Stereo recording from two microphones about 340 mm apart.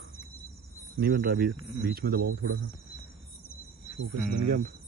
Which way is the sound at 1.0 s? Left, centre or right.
Right.